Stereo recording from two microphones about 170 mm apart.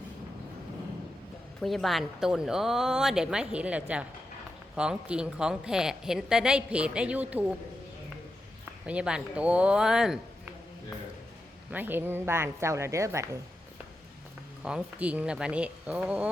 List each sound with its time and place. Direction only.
1.6 s a woman's voice: centre (ahead or behind)
8.9 s a woman's voice: 5° right (ahead or behind)
11.7 s speech: 10° right (ahead or behind)
14.6 s speech: 5° right (ahead or behind)